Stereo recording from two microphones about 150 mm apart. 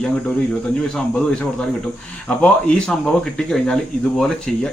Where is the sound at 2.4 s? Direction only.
5° left (ahead or behind).